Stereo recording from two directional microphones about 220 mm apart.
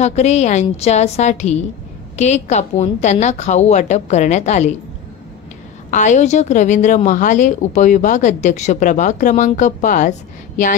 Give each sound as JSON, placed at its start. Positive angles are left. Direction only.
{"t": 0.0, "sound": "a woman's voice", "side_deg": 30}
{"t": 5.9, "sound": "a woman's voice", "side_deg": 35}